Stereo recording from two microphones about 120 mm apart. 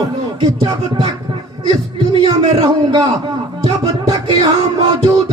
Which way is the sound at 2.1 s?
40° right (ahead or behind).